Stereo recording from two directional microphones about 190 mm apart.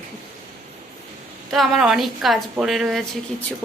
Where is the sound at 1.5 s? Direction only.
Centre (ahead or behind).